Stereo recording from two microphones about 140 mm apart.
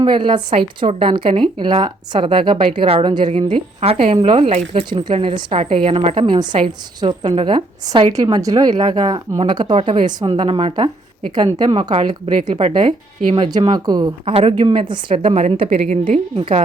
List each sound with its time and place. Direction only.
0.0 s a woman's voice: 35° right (ahead or behind)
4.9 s a woman's voice: 35° right (ahead or behind)
11.3 s a woman's voice: 30° right (ahead or behind)
11.7 s a woman's voice: 40° right (ahead or behind)
14.3 s a woman's voice: 45° right (ahead or behind)